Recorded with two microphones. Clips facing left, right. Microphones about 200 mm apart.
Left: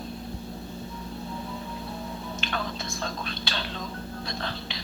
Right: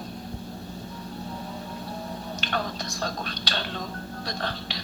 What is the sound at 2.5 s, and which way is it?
Whispering, 40° right (ahead or behind).